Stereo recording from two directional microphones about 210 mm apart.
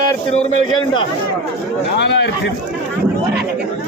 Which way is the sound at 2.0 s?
55° left (ahead or behind).